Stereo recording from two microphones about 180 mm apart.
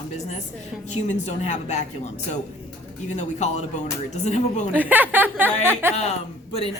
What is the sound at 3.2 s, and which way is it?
A man's voice, 40° left (ahead or behind).